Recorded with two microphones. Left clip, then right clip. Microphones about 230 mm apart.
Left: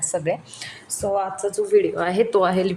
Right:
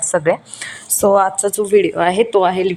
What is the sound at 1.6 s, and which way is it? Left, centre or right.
Speech, right.